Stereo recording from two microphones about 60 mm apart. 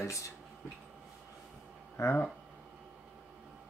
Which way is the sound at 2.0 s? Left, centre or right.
Left.